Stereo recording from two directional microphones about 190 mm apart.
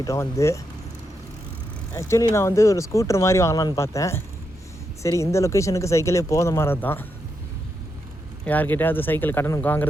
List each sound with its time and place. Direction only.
0.0 s speech: 15° left (ahead or behind)
1.9 s speech: 15° left (ahead or behind)
8.4 s speech: 10° left (ahead or behind)